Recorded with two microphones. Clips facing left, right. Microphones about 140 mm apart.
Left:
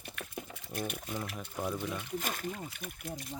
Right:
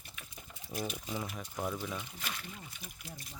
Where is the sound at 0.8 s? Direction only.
55° left (ahead or behind).